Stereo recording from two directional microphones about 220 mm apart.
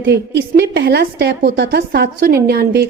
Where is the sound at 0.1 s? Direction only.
50° right (ahead or behind).